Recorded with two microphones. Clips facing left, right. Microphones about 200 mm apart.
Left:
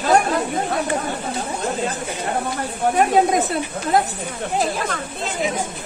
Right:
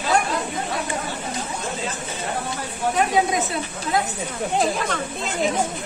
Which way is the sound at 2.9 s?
55° left (ahead or behind).